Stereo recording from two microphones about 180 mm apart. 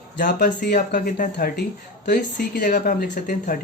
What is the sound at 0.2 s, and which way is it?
Speech, 55° left (ahead or behind).